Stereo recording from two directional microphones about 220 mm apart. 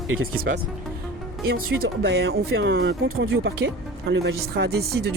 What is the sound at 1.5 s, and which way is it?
Speech, 45° right (ahead or behind).